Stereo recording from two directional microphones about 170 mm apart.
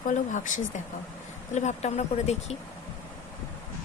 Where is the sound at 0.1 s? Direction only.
50° left (ahead or behind).